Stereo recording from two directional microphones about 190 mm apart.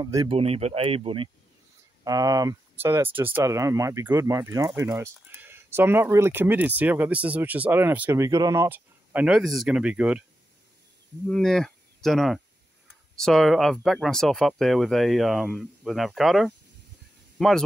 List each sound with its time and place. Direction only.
0.0 s speech: 20° right (ahead or behind)
0.4 s speech: 35° right (ahead or behind); by 10.2 s 5° right (ahead or behind)
11.2 s speech: 5° left (ahead or behind)